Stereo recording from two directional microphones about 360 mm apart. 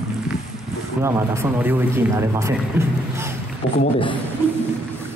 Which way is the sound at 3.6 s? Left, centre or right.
Left.